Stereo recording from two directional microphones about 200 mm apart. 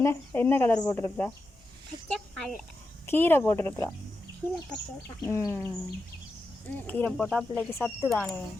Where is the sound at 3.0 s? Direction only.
10° left (ahead or behind).